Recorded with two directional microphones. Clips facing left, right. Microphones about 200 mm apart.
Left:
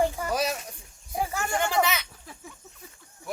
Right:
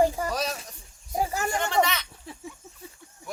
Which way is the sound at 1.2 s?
40° right (ahead or behind).